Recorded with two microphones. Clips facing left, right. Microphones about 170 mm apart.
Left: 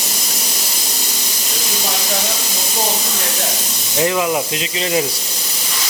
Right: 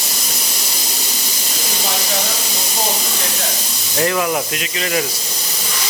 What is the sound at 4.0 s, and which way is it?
Speech, 15° left (ahead or behind).